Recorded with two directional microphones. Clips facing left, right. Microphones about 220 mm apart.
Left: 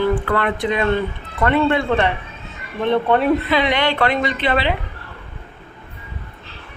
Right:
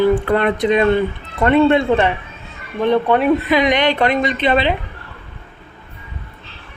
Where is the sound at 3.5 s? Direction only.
15° right (ahead or behind).